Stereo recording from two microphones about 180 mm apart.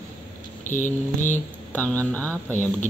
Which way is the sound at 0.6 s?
45° left (ahead or behind).